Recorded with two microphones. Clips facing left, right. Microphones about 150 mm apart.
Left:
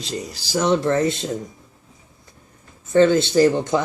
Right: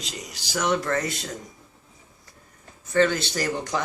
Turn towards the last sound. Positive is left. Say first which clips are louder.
# left 10 dB
turn(degrees=25)  # may be behind; listen again after turning